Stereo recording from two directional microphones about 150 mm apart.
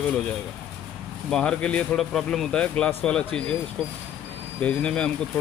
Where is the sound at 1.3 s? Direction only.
5° left (ahead or behind).